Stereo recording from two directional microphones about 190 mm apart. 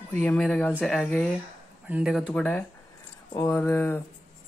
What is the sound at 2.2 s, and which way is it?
Speech, 5° left (ahead or behind).